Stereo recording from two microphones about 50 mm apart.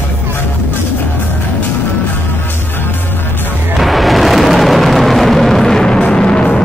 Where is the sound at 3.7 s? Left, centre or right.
Centre.